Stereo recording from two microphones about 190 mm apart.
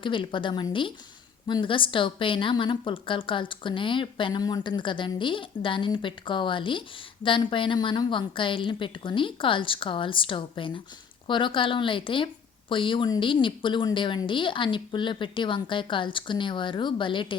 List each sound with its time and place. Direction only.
0.0 s a woman's voice: 25° left (ahead or behind)